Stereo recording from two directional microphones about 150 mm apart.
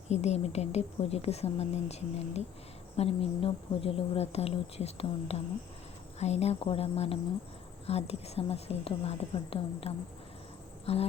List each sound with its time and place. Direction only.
0.1 s speech: 45° left (ahead or behind)